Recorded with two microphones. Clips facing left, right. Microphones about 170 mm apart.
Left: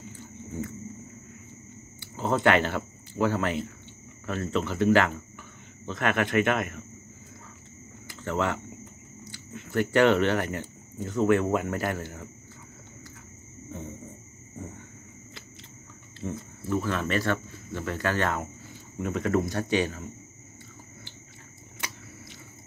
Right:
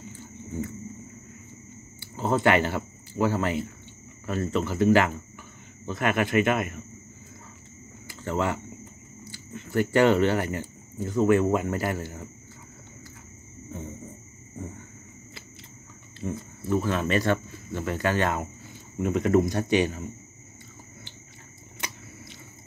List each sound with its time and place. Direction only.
2.0 s speech: 5° right (ahead or behind)
8.2 s speech: 10° right (ahead or behind)
16.2 s speech: 15° right (ahead or behind)